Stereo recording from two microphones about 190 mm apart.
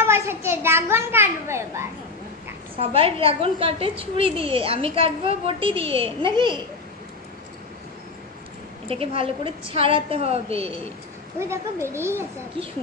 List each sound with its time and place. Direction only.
0.0 s a child's voice: 15° right (ahead or behind)
2.8 s a woman's voice: 30° right (ahead or behind)
8.8 s a woman's voice: 30° right (ahead or behind)
11.3 s speech: 15° right (ahead or behind)